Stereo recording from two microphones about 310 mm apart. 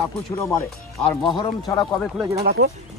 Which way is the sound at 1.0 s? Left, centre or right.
Centre.